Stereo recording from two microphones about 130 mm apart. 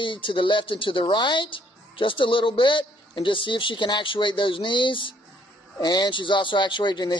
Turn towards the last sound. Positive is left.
turn(degrees=35)  # may be behind; listen again after turning